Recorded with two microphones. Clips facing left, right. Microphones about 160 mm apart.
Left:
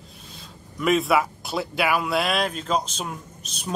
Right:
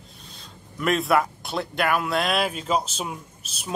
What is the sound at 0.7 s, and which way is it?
A man's voice, centre (ahead or behind).